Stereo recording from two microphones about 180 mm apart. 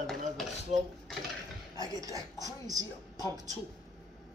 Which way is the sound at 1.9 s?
20° right (ahead or behind).